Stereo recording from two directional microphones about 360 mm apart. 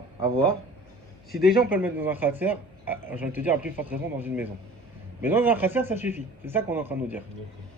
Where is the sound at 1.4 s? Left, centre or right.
Centre.